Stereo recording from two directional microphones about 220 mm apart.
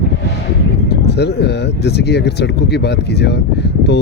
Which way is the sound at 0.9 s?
50° left (ahead or behind).